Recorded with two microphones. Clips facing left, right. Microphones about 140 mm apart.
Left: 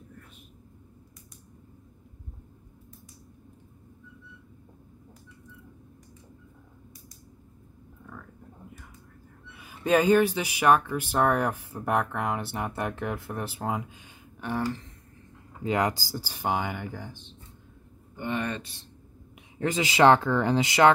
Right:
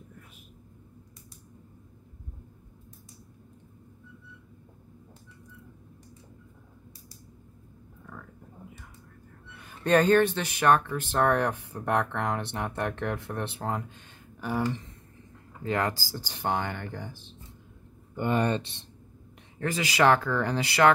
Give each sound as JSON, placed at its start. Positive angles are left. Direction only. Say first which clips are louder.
{"t": 8.1, "sound": "a sound", "louder": "even", "side_deg": 0}
{"t": 9.5, "sound": "speech", "louder": "even", "side_deg": 5}
{"t": 15.6, "sound": "speech", "louder": "left 2 dB", "side_deg": 15}
{"t": 16.2, "sound": "speech", "louder": "left 1 dB", "side_deg": 5}
{"t": 18.1, "sound": "speech", "louder": "right 4 dB", "side_deg": -45}
{"t": 18.4, "sound": "speech", "louder": "right 5 dB", "side_deg": -30}
{"t": 19.6, "sound": "speech", "louder": "left 3 dB", "side_deg": 20}